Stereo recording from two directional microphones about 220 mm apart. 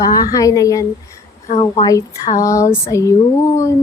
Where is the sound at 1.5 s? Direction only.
30° left (ahead or behind).